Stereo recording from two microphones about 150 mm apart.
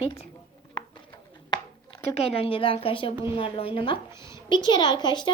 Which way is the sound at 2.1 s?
40° left (ahead or behind).